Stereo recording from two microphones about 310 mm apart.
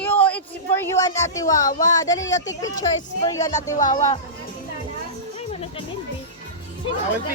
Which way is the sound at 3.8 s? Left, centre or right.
Left.